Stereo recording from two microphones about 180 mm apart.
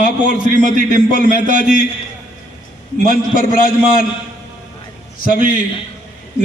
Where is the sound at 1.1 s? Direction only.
50° left (ahead or behind).